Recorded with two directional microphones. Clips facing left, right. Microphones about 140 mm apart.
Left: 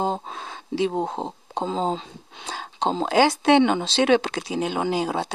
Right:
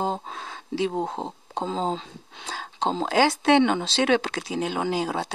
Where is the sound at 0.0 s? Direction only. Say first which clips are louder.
Left 2 dB; 20° left (ahead or behind).